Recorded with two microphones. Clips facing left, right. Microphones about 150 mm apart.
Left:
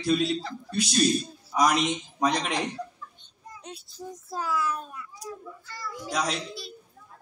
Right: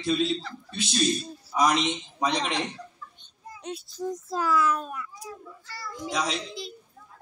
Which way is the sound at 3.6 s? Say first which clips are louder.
Right 8 dB; 90° right.